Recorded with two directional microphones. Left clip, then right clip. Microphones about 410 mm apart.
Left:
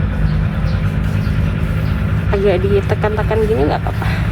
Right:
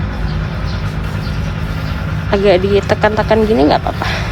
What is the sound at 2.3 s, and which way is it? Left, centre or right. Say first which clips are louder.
Speech: right 4 dB; right.